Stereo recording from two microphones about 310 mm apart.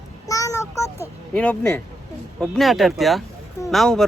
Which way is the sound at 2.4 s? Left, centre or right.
Centre.